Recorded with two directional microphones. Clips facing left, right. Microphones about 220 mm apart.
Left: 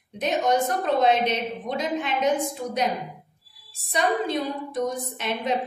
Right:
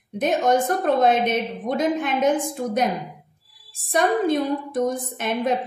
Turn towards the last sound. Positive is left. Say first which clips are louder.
# right 4 dB
turn(degrees=-50)  # may be behind; listen again after turning